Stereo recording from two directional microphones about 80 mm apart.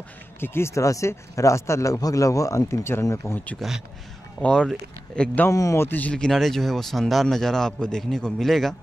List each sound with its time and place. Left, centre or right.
0.4 s speech: left
3.5 s a man's voice: centre
4.4 s speech: centre
5.5 s a man's voice: left
5.9 s speech: left
6.1 s a man's voice: centre